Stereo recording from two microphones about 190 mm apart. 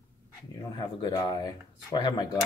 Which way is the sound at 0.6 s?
20° left (ahead or behind).